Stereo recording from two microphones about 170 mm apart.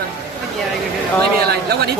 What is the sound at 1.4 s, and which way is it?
Speech, 70° right (ahead or behind).